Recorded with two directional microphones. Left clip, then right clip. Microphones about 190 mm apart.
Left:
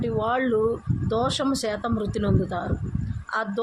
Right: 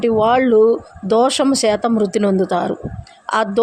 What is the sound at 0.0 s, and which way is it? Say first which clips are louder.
Speech: right 11 dB; 35° right (ahead or behind).